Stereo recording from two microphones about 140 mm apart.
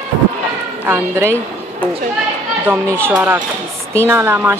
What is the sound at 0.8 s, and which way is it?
Speech, 15° right (ahead or behind).